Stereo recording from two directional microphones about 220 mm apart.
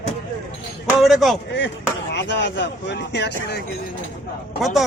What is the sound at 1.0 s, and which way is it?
Speech, centre (ahead or behind).